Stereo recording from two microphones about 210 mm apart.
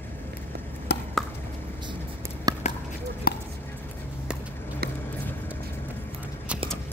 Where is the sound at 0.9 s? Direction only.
55° left (ahead or behind).